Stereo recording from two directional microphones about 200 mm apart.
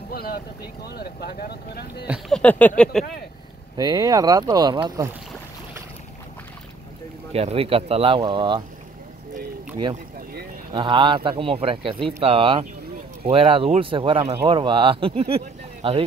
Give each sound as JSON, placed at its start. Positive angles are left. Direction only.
{"t": 0.1, "sound": "vehicle", "side_deg": 50}
{"t": 0.9, "sound": "speech", "side_deg": 50}
{"t": 2.0, "sound": "speech", "side_deg": 0}
{"t": 3.7, "sound": "speech", "side_deg": -20}
{"t": 7.3, "sound": "speech", "side_deg": -30}
{"t": 10.7, "sound": "speech", "side_deg": -25}